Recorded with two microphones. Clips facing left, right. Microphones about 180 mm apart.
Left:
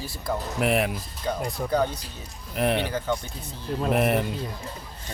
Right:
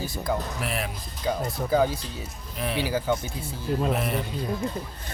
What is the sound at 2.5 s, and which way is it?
Speech, 60° left (ahead or behind).